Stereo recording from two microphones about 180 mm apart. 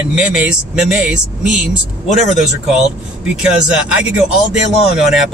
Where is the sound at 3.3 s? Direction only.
5° right (ahead or behind).